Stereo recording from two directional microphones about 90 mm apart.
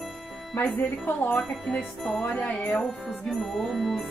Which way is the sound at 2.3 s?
15° left (ahead or behind).